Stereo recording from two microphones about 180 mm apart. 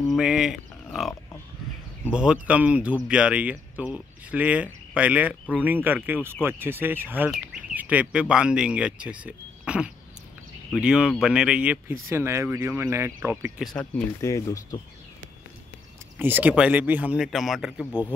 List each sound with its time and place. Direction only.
0.1 s speech: 5° right (ahead or behind)
2.1 s speech: 5° right (ahead or behind)
13.7 s speech: 5° left (ahead or behind)
14.2 s speech: 20° left (ahead or behind)
16.2 s speech: 10° right (ahead or behind)